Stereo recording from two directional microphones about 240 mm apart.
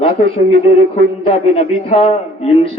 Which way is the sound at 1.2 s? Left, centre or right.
Left.